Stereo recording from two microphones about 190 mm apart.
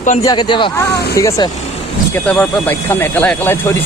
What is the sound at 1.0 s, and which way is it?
Speech, 55° left (ahead or behind).